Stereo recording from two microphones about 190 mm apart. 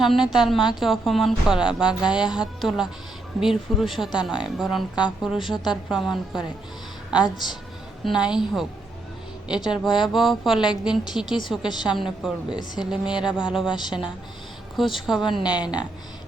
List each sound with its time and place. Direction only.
0.0 s a woman's voice: centre (ahead or behind)
8.0 s a woman's voice: 5° right (ahead or behind)
15.3 s speech: 20° left (ahead or behind)